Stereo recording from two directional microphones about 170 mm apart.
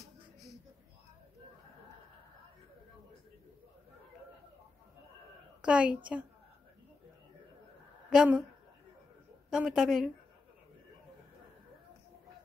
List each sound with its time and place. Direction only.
5.6 s a woman's voice: 5° right (ahead or behind)
8.1 s a woman's voice: 5° right (ahead or behind)
9.5 s a woman's voice: 5° right (ahead or behind)